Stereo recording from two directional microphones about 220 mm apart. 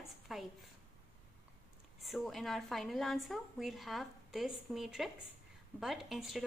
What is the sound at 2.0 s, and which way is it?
A woman's voice, centre (ahead or behind).